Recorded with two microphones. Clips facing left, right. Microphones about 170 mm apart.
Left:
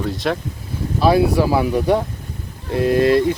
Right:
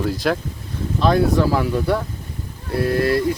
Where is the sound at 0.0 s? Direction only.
Centre (ahead or behind).